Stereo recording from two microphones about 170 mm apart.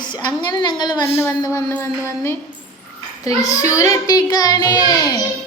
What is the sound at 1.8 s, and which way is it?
Speech, 15° left (ahead or behind).